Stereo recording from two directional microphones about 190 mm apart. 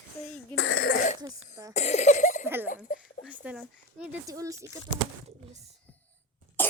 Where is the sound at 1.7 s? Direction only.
35° left (ahead or behind).